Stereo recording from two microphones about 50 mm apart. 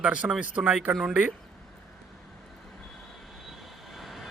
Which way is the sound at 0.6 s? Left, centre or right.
Centre.